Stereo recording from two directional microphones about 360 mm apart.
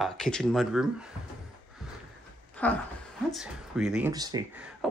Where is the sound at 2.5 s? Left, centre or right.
Centre.